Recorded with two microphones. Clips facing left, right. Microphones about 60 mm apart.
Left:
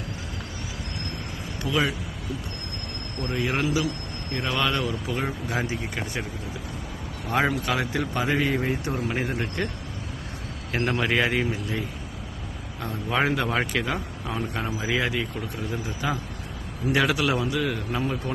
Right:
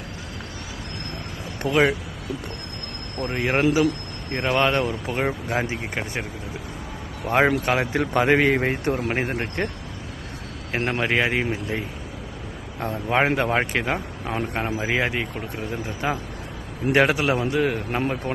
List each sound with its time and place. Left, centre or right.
1.6 s speech: right
3.2 s speech: right
7.3 s speech: right
8.8 s speech: right
10.7 s speech: right
12.8 s speech: right
16.9 s speech: right
17.2 s speech: right